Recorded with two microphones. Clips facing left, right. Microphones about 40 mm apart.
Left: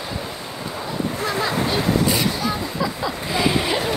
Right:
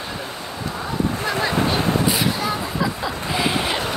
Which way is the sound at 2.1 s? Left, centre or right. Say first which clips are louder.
Even; centre.